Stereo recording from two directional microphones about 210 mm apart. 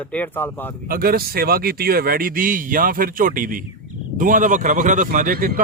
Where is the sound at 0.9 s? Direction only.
45° right (ahead or behind).